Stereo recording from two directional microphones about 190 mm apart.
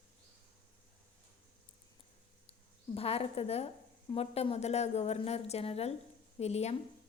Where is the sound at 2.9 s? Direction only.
30° left (ahead or behind).